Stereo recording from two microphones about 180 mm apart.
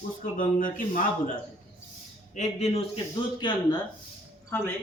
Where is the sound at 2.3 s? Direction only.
40° left (ahead or behind).